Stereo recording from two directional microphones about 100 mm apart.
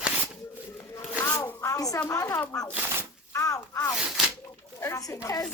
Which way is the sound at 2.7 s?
25° right (ahead or behind).